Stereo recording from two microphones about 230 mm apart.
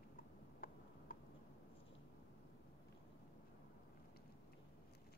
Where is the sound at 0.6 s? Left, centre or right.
Left.